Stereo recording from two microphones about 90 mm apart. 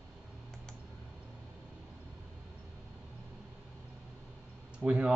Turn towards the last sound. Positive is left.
turn(degrees=-10)  # may be behind; listen again after turning